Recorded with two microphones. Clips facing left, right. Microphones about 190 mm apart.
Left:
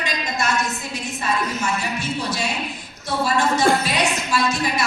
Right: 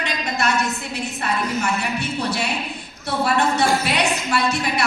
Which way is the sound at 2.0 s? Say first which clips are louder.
Right 1 dB; 60° right (ahead or behind).